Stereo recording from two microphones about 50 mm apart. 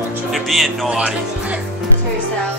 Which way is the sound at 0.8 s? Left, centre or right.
Right.